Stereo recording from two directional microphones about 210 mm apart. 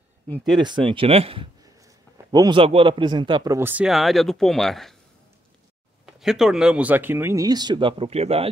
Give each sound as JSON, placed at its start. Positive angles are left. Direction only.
{"t": 0.6, "sound": "a man's voice", "side_deg": -20}
{"t": 6.0, "sound": "a man's voice", "side_deg": 0}